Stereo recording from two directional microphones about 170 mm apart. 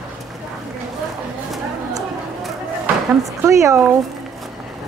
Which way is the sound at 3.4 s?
20° right (ahead or behind).